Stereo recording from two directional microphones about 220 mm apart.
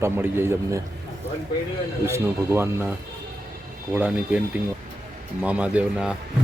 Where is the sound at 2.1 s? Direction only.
10° right (ahead or behind).